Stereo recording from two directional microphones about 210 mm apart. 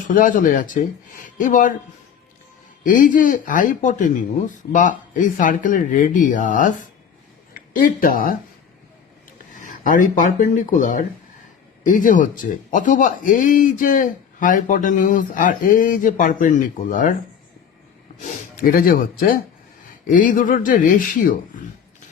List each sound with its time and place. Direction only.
0.1 s speech: 40° left (ahead or behind)
2.8 s speech: 40° left (ahead or behind)
9.6 s speech: 40° left (ahead or behind)
18.5 s speech: 40° left (ahead or behind)